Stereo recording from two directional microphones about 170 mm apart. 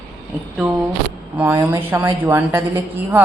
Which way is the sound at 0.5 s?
Centre (ahead or behind).